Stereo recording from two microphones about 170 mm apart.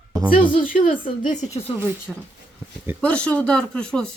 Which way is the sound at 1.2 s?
45° left (ahead or behind).